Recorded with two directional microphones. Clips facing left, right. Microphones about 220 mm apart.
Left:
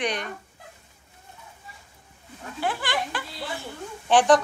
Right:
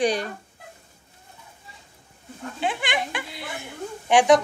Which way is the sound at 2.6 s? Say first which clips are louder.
Right 1 dB; 15° right (ahead or behind).